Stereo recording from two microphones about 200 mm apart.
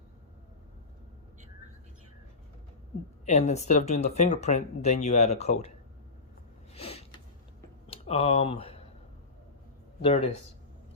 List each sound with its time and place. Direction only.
3.2 s speech: 35° left (ahead or behind)
6.7 s a sound: 30° left (ahead or behind)
7.9 s speech: 30° left (ahead or behind)
10.0 s speech: 30° left (ahead or behind)